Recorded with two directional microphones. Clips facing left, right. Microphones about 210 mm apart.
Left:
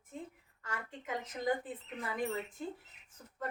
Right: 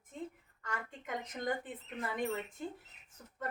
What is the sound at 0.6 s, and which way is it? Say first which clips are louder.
Speech: even; 5° left (ahead or behind).